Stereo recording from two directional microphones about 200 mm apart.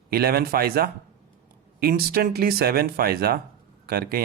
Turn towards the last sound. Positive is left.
turn(degrees=-50)  # may be behind; listen again after turning